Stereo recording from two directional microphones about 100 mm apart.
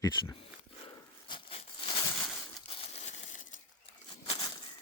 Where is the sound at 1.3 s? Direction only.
60° left (ahead or behind); by 3.2 s 90° left.